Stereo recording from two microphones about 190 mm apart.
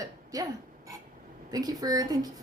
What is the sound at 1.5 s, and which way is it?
Speech, 20° right (ahead or behind).